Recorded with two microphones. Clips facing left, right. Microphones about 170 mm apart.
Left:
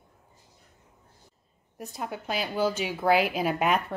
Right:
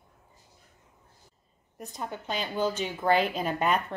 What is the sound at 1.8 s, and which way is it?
A woman's voice, 5° left (ahead or behind).